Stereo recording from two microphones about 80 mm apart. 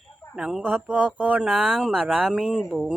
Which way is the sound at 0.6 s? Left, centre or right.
Centre.